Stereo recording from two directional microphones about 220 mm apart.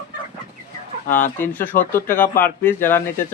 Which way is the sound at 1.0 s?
35° left (ahead or behind).